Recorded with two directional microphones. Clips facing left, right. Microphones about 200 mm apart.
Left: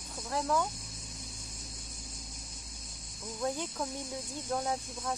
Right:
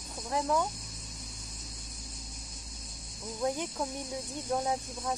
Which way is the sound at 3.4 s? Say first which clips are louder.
Right 2 dB; 15° right (ahead or behind).